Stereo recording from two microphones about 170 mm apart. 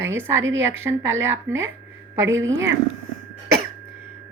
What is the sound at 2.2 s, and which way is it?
Speech, 90° right.